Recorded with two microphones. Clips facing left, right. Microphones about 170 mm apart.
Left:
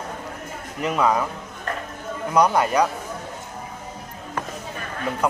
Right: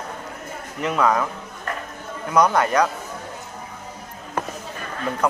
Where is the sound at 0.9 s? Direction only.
20° left (ahead or behind).